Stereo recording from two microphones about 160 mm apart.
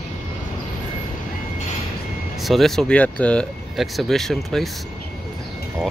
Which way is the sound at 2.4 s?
Centre (ahead or behind).